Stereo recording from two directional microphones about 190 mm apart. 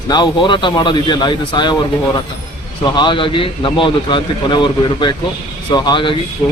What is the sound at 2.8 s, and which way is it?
A man's voice, 25° left (ahead or behind).